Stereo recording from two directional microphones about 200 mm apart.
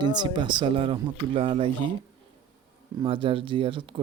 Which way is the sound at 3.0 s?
25° right (ahead or behind).